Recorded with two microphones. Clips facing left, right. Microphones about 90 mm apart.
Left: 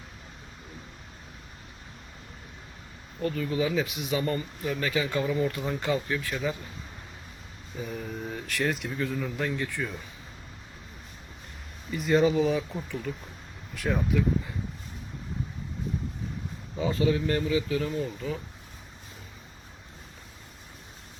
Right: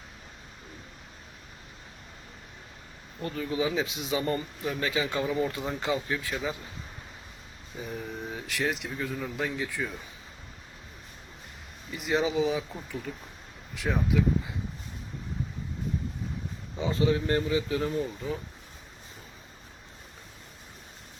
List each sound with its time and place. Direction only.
3.2 s speech: 25° right (ahead or behind)
7.8 s speech: 10° right (ahead or behind)
11.9 s speech: 15° right (ahead or behind)
16.8 s speech: 30° right (ahead or behind)